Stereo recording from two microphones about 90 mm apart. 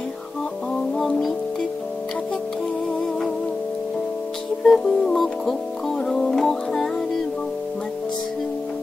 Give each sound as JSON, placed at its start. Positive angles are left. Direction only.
{"t": 0.9, "sound": "music", "side_deg": 5}
{"t": 4.6, "sound": "music", "side_deg": 5}